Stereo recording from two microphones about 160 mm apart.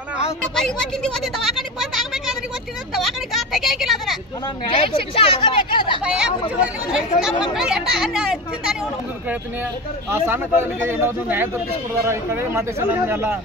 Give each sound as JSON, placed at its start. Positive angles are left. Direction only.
{"t": 0.4, "sound": "speech", "side_deg": 5}
{"t": 2.9, "sound": "vehicle", "side_deg": 0}
{"t": 4.6, "sound": "speech", "side_deg": 35}
{"t": 6.0, "sound": "a child's voice", "side_deg": -5}
{"t": 10.0, "sound": "speech", "side_deg": -15}